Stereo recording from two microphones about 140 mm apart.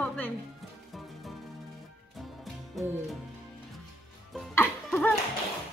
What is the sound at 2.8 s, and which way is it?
Music, centre (ahead or behind).